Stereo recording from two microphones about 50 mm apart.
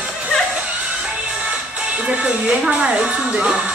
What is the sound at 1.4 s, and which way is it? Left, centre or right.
Speech, right.